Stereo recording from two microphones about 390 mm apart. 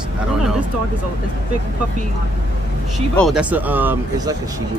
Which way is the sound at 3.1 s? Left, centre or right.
Centre.